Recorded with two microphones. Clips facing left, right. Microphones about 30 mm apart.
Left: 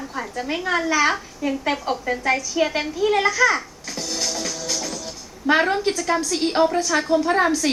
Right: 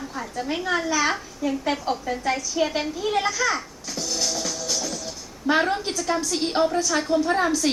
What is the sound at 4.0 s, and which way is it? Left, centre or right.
Music, left.